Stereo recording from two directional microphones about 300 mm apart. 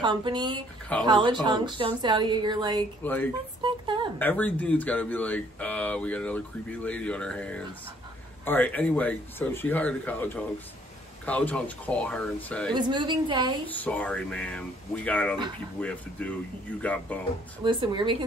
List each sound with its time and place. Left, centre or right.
0.0 s speech: centre
3.0 s speech: centre
3.6 s a sound: centre
4.2 s speech: centre
12.7 s speech: centre
13.7 s speech: centre
17.6 s speech: centre